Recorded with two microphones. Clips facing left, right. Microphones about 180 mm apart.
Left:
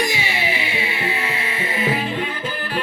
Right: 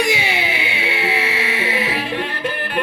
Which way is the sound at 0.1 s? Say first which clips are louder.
Right 3 dB; 65° right (ahead or behind).